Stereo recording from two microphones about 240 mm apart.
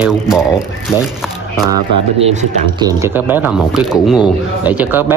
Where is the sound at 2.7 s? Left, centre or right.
Centre.